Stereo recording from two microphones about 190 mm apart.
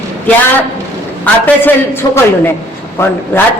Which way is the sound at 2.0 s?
20° left (ahead or behind).